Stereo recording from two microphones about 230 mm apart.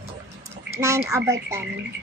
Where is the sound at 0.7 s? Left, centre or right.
Centre.